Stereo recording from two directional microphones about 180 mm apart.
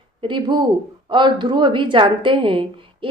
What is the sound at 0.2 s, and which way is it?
A woman's voice, 25° right (ahead or behind).